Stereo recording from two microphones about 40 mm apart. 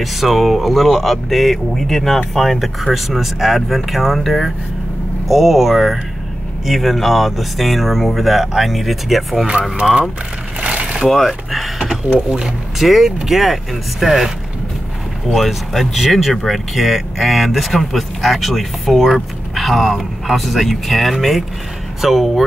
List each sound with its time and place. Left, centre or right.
0.0 s speech: centre
9.5 s speech: right
11.1 s speech: centre
12.3 s speech: right
12.7 s speech: centre
15.3 s speech: centre